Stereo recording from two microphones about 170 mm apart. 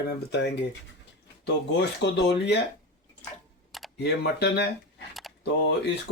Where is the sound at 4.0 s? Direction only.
75° left (ahead or behind); by 5.0 s 90° left.